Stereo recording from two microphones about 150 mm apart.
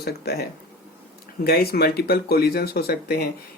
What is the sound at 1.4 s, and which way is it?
Speech, 90° left.